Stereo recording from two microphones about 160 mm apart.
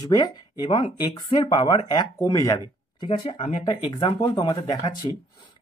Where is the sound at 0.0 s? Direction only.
25° left (ahead or behind).